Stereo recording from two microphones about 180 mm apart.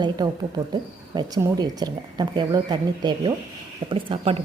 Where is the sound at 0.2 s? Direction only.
20° right (ahead or behind).